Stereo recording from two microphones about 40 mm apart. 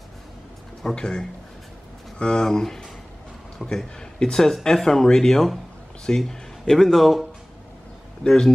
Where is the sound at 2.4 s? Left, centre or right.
Centre.